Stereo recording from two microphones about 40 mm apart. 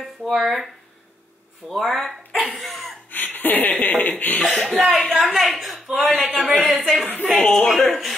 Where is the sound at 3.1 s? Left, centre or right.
Left.